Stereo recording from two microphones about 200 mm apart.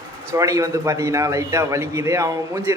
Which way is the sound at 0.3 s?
15° right (ahead or behind).